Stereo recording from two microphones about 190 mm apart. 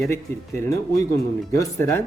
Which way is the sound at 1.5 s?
15° left (ahead or behind).